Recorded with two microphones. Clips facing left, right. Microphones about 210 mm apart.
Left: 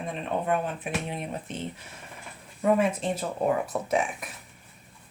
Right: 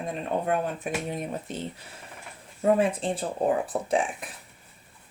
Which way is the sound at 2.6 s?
30° right (ahead or behind).